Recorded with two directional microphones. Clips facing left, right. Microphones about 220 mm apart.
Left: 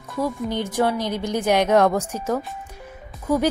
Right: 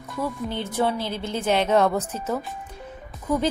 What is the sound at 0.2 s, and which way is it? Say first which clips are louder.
A woman's voice: left 4 dB; 15° left (ahead or behind).